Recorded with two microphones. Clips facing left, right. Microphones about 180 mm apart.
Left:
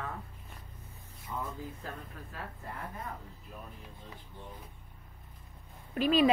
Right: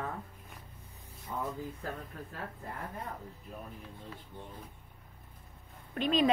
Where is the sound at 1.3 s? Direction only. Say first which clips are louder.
Right 1 dB; 40° right (ahead or behind).